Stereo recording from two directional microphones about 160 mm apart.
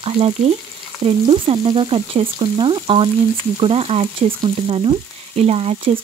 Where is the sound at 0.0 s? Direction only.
35° right (ahead or behind).